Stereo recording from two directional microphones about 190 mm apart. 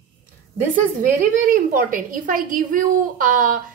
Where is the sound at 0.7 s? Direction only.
45° right (ahead or behind).